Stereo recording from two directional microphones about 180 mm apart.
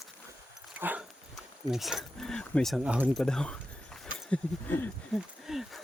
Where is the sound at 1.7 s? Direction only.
Centre (ahead or behind).